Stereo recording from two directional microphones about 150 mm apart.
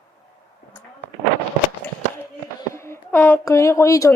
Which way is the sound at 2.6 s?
15° left (ahead or behind).